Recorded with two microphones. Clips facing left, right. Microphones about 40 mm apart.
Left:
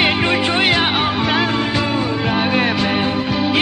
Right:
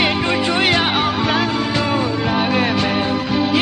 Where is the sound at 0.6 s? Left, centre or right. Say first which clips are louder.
Even; centre.